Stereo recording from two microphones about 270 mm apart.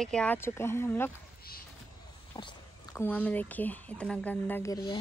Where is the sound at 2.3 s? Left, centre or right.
Centre.